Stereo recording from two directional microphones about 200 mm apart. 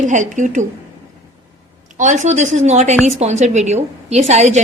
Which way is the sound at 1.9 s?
40° right (ahead or behind).